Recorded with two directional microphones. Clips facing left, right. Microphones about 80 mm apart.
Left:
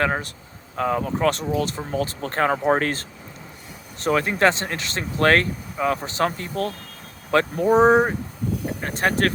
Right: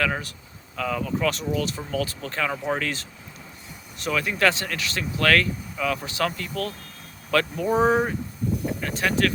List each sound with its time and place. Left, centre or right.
0.0 s speech: left